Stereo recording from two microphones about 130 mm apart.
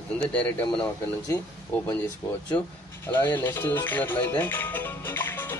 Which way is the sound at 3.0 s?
15° left (ahead or behind).